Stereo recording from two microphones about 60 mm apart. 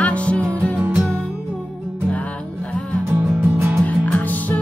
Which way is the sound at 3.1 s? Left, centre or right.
Right.